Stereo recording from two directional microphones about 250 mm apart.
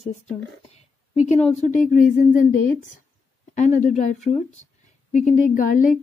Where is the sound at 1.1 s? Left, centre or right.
Left.